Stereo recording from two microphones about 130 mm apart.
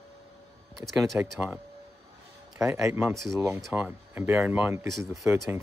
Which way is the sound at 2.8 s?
20° right (ahead or behind).